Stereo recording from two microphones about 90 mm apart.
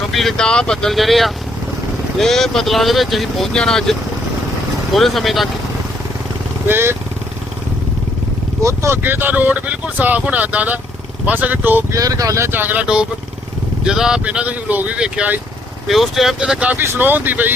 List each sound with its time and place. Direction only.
0.1 s speech: centre (ahead or behind)
4.9 s speech: centre (ahead or behind)
6.7 s speech: 25° right (ahead or behind)
8.6 s speech: 30° right (ahead or behind)
11.9 s speech: 40° right (ahead or behind); by 12.8 s 20° right (ahead or behind)
13.8 s speech: 5° right (ahead or behind)
15.9 s speech: centre (ahead or behind)
16.8 s speech: 25° right (ahead or behind)